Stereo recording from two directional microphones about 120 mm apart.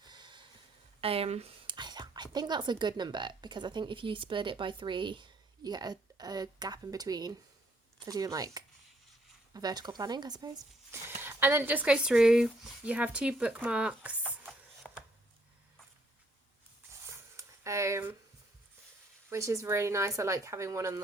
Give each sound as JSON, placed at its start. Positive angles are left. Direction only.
{"t": 0.0, "sound": "snort", "side_deg": -40}
{"t": 1.0, "sound": "speech", "side_deg": -55}
{"t": 1.6, "sound": "speech", "side_deg": -40}
{"t": 11.2, "sound": "speech", "side_deg": -20}
{"t": 14.8, "sound": "a sound", "side_deg": 10}
{"t": 17.1, "sound": "a sound", "side_deg": -25}
{"t": 19.3, "sound": "speech", "side_deg": -25}